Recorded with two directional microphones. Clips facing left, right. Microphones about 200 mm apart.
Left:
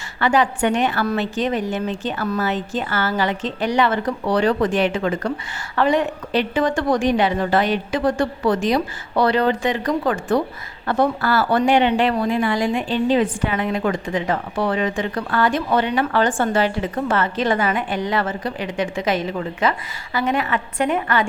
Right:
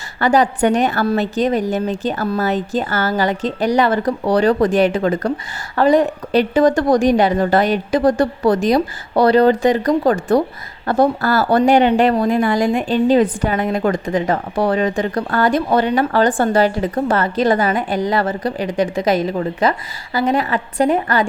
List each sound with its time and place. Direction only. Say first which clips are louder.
0.2 s speech: right 4 dB; 40° right (ahead or behind)